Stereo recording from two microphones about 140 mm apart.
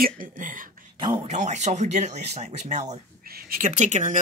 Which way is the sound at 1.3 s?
60° right (ahead or behind).